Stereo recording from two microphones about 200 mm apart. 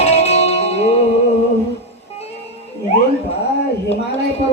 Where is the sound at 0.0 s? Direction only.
30° left (ahead or behind).